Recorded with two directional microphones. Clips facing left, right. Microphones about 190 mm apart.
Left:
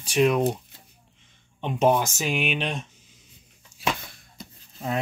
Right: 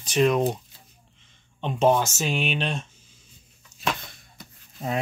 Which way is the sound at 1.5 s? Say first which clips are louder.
Right 1 dB; 10° left (ahead or behind).